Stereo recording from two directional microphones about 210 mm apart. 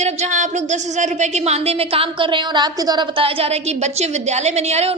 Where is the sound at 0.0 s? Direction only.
35° right (ahead or behind).